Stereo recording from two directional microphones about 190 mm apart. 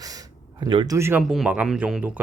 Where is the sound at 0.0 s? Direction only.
20° right (ahead or behind).